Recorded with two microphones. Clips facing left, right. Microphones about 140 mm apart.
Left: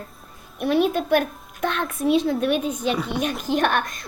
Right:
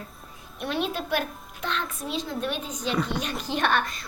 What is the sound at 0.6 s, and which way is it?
A woman's voice, 50° left (ahead or behind).